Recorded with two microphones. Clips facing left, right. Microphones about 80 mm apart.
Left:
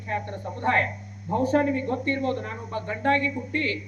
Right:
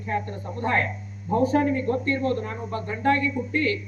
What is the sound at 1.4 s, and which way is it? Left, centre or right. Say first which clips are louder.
Speech: right 1 dB; left.